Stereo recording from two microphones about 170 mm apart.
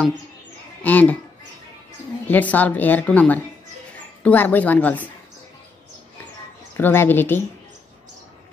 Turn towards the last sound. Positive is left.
turn(degrees=10)  # may be behind; listen again after turning